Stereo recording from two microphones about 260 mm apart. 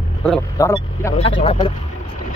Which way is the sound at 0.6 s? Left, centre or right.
Centre.